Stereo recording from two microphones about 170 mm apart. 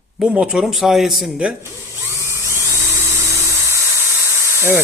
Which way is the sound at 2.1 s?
15° right (ahead or behind).